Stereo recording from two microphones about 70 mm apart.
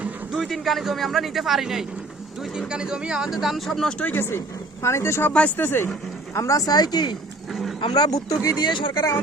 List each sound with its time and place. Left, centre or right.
0.3 s speech: centre
3.8 s speech: centre
4.1 s speech: left
5.3 s speech: centre
5.5 s speech: left
6.3 s speech: left
7.5 s a sound: centre
7.9 s speech: left
8.6 s speech: left